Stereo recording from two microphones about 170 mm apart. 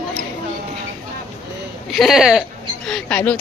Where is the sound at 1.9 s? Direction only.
Centre (ahead or behind).